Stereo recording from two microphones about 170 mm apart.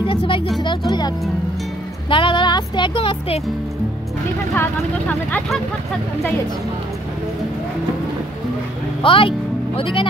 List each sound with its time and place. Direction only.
0.0 s speech: 30° left (ahead or behind)
4.6 s speech: 10° left (ahead or behind)
9.0 s speech: 30° left (ahead or behind)